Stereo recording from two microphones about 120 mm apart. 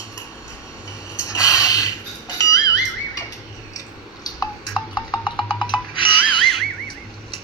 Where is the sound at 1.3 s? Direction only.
30° left (ahead or behind).